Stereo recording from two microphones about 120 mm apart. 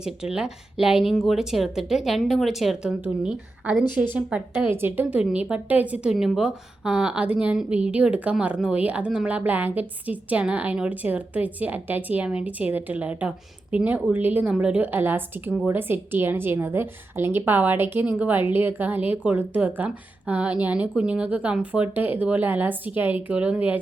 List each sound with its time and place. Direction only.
0.0 s a woman's voice: 5° right (ahead or behind)